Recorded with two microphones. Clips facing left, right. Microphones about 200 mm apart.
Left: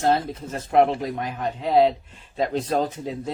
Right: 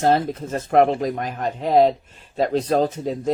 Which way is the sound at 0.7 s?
50° right (ahead or behind).